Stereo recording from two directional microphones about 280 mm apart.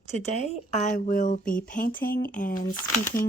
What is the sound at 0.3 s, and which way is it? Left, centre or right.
Speech, left.